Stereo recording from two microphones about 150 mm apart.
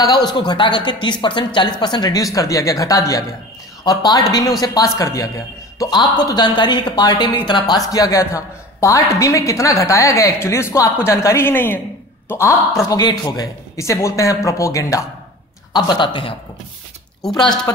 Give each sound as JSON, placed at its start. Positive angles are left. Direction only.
{"t": 0.0, "sound": "a woman's voice", "side_deg": 25}
{"t": 17.2, "sound": "speech", "side_deg": 5}